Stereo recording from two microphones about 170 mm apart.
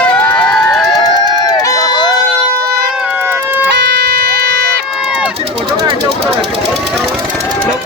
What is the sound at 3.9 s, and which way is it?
Music, 75° right (ahead or behind).